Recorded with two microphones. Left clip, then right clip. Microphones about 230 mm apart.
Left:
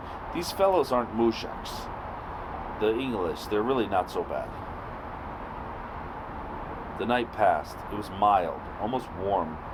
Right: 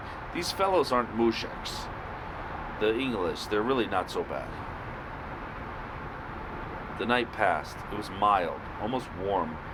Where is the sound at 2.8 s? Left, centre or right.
Left.